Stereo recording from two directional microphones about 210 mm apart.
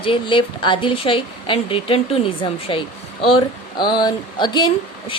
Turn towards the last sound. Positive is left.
turn(degrees=20)  # may be behind; listen again after turning